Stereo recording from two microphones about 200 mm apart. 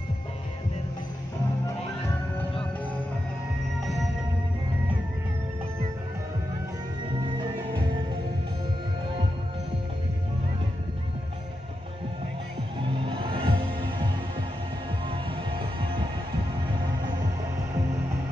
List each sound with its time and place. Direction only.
13.0 s music: 25° right (ahead or behind)